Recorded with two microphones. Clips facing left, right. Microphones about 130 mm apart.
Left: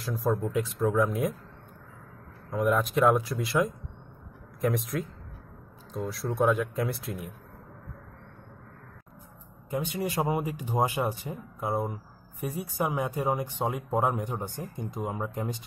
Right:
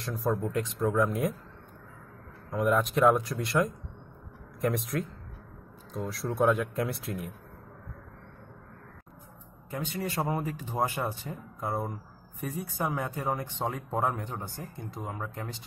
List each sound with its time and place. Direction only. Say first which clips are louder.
0.0 s speech: left 2 dB; centre (ahead or behind)
2.5 s speech: left 1 dB; centre (ahead or behind)
9.7 s speech: left 3 dB; 15° left (ahead or behind)